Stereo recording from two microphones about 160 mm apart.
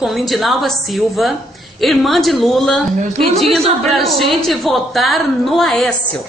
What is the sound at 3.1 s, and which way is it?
Speech, 40° right (ahead or behind).